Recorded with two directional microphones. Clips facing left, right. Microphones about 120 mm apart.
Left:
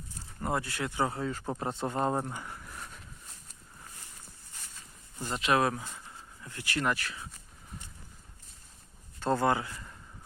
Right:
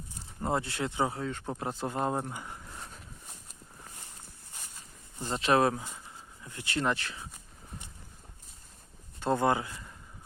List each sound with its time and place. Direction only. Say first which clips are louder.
0.1 s speech: right 1 dB; 20° right (ahead or behind)
1.1 s speech: left 1 dB; 5° left (ahead or behind)
2.3 s a sound: even; 20° right (ahead or behind)
5.2 s speech: right 2 dB; 30° right (ahead or behind)
6.4 s speech: right 1 dB; 20° right (ahead or behind)
9.2 s speech: even; 20° right (ahead or behind)